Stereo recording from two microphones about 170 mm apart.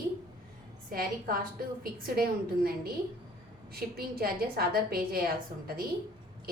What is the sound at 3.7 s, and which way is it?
A woman's voice, 65° right (ahead or behind).